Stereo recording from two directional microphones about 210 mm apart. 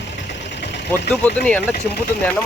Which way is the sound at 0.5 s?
55° left (ahead or behind).